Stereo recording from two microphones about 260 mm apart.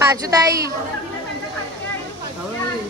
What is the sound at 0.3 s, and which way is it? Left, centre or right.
Goose, centre.